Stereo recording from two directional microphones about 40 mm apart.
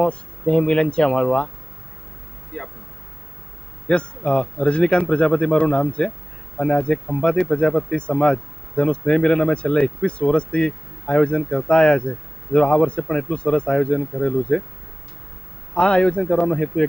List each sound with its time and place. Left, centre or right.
0.0 s speech: left
2.5 s speech: left
3.8 s speech: left
15.7 s speech: left